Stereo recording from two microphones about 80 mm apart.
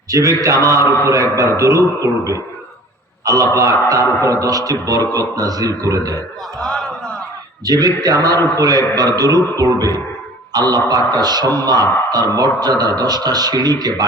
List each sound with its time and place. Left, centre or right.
0.1 s a man's voice: right
6.6 s a sound: centre
7.6 s a man's voice: right